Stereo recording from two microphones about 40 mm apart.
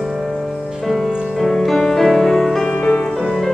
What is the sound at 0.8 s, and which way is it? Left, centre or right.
Music, centre.